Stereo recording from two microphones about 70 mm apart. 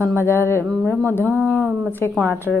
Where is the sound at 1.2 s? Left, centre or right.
Right.